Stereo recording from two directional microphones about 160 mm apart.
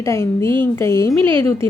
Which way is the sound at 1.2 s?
35° right (ahead or behind).